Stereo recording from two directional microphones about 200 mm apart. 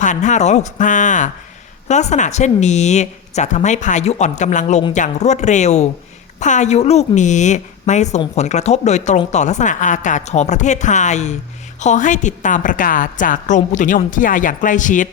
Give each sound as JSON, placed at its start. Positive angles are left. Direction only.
{"t": 0.0, "sound": "a woman's voice", "side_deg": 40}